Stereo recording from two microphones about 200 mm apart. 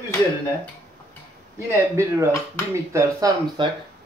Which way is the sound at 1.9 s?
15° right (ahead or behind).